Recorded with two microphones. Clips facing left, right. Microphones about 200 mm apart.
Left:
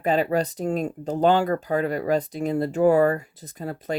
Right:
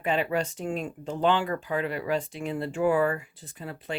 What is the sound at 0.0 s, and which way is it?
Speech, 40° left (ahead or behind).